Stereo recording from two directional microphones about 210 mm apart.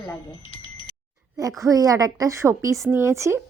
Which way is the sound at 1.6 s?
15° right (ahead or behind).